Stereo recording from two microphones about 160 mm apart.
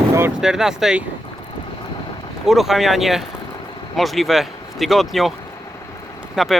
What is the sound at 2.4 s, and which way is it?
Speech, centre (ahead or behind).